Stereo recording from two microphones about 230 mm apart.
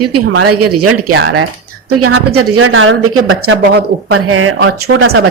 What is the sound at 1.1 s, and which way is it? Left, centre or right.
Speech, right.